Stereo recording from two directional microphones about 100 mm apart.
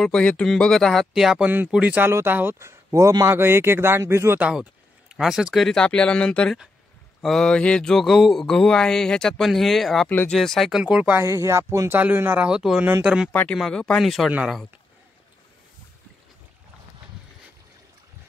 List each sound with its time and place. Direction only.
0.0 s a sound: 10° left (ahead or behind)
1.5 s speech: 15° right (ahead or behind); by 3.3 s 35° right (ahead or behind)
3.3 s speech: 25° right (ahead or behind)
4.4 s speech: 10° right (ahead or behind)
5.1 s a sound: 5° right (ahead or behind)
10.0 s speech: 15° left (ahead or behind)
10.3 s a sound: 5° left (ahead or behind)
11.1 s speech: 30° right (ahead or behind)
11.9 s speech: 20° right (ahead or behind)
12.4 s speech: 10° right (ahead or behind)
13.3 s speech: 15° left (ahead or behind)
13.6 s a sound: 10° left (ahead or behind)